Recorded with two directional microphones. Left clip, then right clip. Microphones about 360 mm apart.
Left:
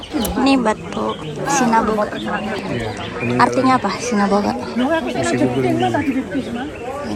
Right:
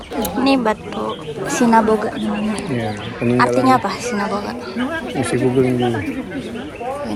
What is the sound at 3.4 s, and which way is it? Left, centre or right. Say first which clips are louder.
Speech: even; centre.